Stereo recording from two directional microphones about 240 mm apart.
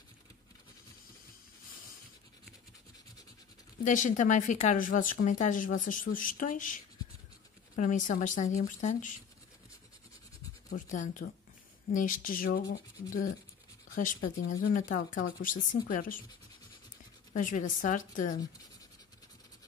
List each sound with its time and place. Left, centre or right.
3.8 s speech: left
10.7 s speech: left
14.3 s speech: left
14.7 s speech: left
15.1 s speech: left
15.4 s speech: left
17.3 s speech: left